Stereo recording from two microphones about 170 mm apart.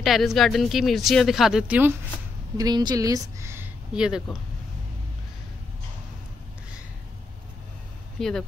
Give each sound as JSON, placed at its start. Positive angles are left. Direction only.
{"t": 0.0, "sound": "speech", "side_deg": 0}
{"t": 2.5, "sound": "speech", "side_deg": -25}
{"t": 8.2, "sound": "speech", "side_deg": 5}